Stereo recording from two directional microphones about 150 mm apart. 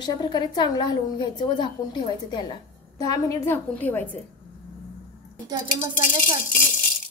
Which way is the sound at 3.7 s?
10° left (ahead or behind).